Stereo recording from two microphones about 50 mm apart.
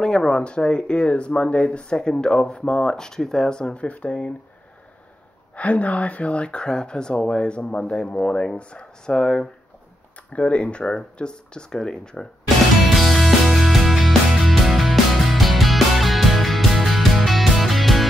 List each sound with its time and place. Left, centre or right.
0.0 s speech: centre
5.6 s speech: left
12.9 s music: centre